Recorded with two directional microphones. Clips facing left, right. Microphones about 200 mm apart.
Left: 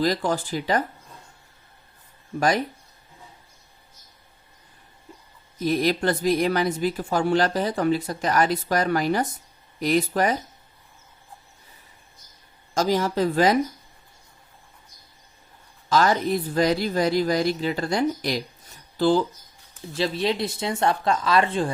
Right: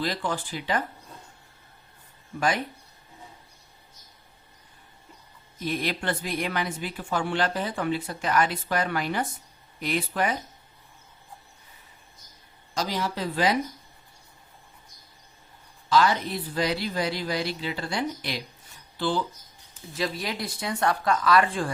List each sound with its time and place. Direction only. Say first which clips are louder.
0.0 s speech: left 6 dB; 40° left (ahead or behind)
2.4 s speech: left 4 dB; 40° left (ahead or behind)
5.6 s speech: left 7 dB; 40° left (ahead or behind)
12.7 s speech: left 7 dB; 45° left (ahead or behind)
15.9 s speech: left 2 dB; 45° left (ahead or behind)
19.9 s speech: left 6 dB; 30° left (ahead or behind)